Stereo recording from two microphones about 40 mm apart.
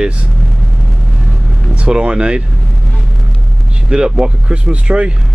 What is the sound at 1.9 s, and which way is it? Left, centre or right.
Speech, right.